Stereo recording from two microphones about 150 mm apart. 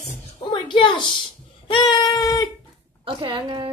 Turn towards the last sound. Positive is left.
turn(degrees=-30)  # may be behind; listen again after turning